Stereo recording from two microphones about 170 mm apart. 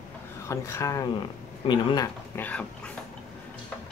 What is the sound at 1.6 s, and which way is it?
Speech, 30° left (ahead or behind).